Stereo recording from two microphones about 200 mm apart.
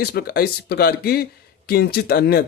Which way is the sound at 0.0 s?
50° left (ahead or behind).